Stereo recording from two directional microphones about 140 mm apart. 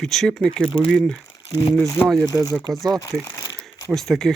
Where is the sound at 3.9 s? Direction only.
Centre (ahead or behind).